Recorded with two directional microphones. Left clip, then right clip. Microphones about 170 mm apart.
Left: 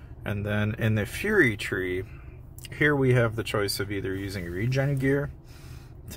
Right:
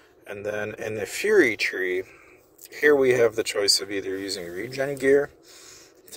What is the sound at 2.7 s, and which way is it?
Speech, 15° right (ahead or behind).